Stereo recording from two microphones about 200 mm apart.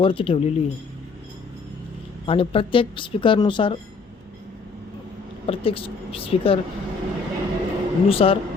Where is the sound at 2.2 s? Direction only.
25° left (ahead or behind).